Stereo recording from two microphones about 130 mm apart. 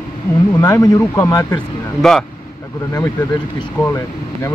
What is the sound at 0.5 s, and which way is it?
Speech, 25° left (ahead or behind).